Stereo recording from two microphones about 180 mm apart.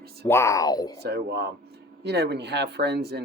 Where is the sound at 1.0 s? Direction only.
65° right (ahead or behind).